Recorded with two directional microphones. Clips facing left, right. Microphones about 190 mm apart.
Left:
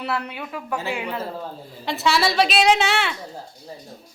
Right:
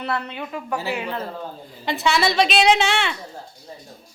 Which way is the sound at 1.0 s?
5° left (ahead or behind).